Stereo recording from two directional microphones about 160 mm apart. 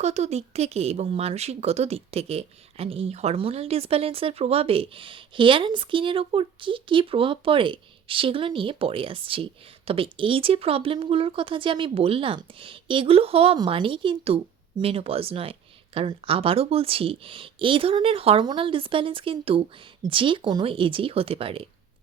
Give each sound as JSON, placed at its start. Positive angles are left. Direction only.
{"t": 0.0, "sound": "speech", "side_deg": -45}